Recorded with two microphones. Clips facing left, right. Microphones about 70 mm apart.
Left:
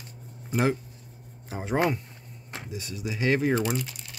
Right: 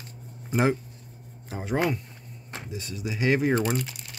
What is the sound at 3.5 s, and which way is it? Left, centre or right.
Speech, right.